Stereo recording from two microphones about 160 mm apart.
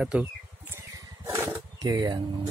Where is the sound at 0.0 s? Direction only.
10° right (ahead or behind).